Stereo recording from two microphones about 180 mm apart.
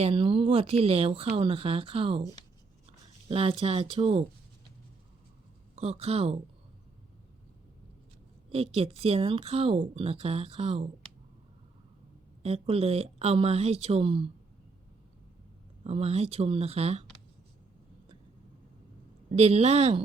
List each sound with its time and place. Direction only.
0.0 s speech: 30° right (ahead or behind)
3.2 s speech: 30° right (ahead or behind)
5.7 s speech: 35° right (ahead or behind)
8.4 s speech: 35° right (ahead or behind)
12.4 s speech: 35° right (ahead or behind)
15.8 s speech: 35° right (ahead or behind)
19.3 s speech: 35° right (ahead or behind)